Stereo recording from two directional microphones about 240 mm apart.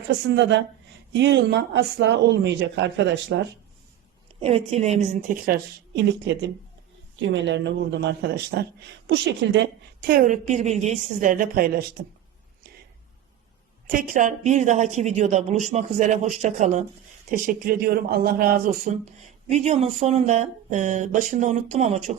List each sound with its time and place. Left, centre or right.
0.3 s speech: right
4.4 s speech: right
7.2 s speech: right
10.1 s speech: right
13.8 s speech: right